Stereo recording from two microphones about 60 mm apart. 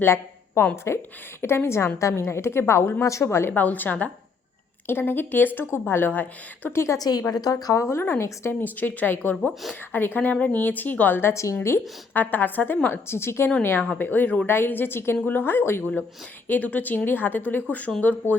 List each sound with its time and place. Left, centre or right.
0.0 s a woman's voice: left
3.0 s speech: left
3.2 s a woman's voice: left
3.5 s a woman's voice: left
6.7 s a woman's voice: left
7.0 s a woman's voice: left
8.6 s a woman's voice: left
11.5 s a woman's voice: left
12.1 s a woman's voice: left
14.4 s a woman's voice: left
16.5 s a woman's voice: left